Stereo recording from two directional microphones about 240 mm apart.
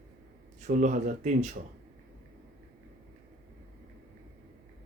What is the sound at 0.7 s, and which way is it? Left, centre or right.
Speech, right.